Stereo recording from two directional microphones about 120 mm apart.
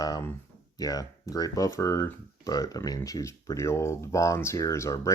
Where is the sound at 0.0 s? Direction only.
30° left (ahead or behind).